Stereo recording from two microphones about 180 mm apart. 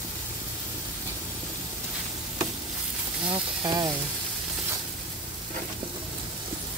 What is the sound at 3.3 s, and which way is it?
Speech, 20° right (ahead or behind).